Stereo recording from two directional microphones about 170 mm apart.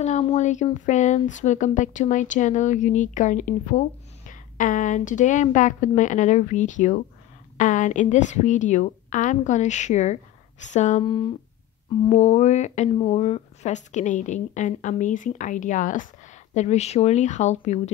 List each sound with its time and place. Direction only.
0.0 s speech: 40° left (ahead or behind)
11.1 s speech: 30° left (ahead or behind)